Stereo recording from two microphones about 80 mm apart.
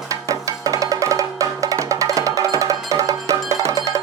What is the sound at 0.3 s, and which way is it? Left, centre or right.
Music, right.